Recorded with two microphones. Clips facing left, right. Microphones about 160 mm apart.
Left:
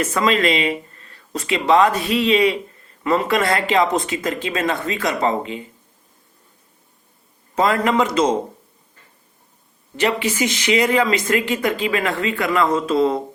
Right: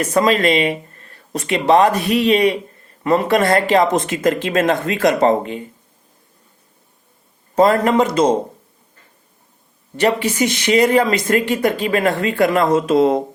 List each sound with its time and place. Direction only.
0.0 s speech: 40° right (ahead or behind)
7.5 s speech: 40° right (ahead or behind)
10.0 s speech: 40° right (ahead or behind)